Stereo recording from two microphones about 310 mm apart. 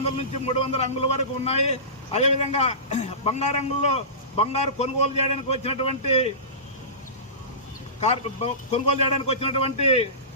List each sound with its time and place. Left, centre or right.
0.2 s a man's voice: centre
8.0 s a man's voice: centre